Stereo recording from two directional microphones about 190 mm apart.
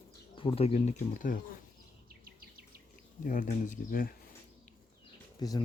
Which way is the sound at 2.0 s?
50° right (ahead or behind).